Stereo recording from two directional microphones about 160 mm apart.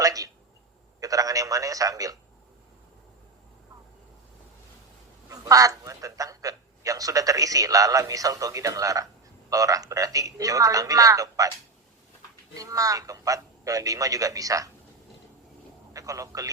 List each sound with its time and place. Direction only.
0.0 s a sound: 20° right (ahead or behind)
0.9 s a man's voice: 20° right (ahead or behind)
5.3 s speech: 20° right (ahead or behind)
12.5 s speech: 20° right (ahead or behind)
15.9 s a man's voice: 20° right (ahead or behind)